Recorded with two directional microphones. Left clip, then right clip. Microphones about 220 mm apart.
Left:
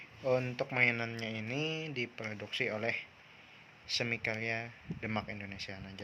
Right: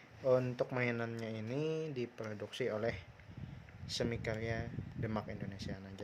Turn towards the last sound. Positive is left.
turn(degrees=-15)  # may be behind; listen again after turning